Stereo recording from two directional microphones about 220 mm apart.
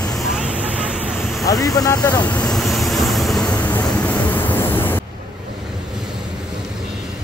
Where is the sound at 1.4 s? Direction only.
15° left (ahead or behind).